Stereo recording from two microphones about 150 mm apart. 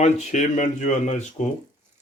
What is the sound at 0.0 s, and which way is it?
Speech, 50° left (ahead or behind).